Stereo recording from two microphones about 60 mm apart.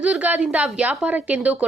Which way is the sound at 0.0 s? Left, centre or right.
Right.